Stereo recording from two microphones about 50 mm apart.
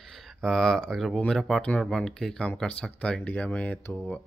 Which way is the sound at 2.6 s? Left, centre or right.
Left.